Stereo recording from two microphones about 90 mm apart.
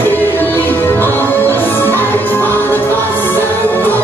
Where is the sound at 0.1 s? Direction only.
20° left (ahead or behind).